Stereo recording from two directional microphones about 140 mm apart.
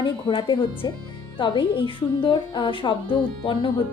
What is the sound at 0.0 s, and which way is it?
Speech, 35° left (ahead or behind).